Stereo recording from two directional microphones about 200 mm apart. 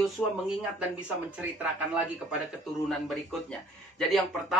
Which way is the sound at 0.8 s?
5° right (ahead or behind).